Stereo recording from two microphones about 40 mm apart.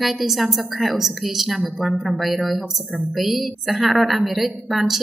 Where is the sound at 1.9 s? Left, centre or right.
Right.